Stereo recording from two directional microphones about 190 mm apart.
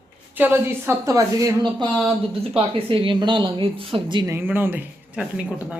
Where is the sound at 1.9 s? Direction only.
Centre (ahead or behind).